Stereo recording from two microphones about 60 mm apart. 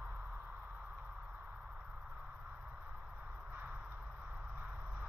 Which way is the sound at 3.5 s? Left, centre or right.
Right.